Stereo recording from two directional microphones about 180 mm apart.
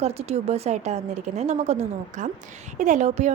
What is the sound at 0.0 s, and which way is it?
A woman's voice, 35° right (ahead or behind).